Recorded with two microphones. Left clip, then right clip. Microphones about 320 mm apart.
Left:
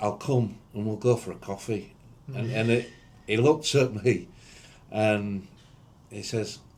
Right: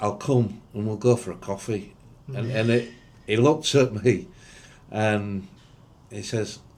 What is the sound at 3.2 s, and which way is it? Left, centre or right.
A man's voice, right.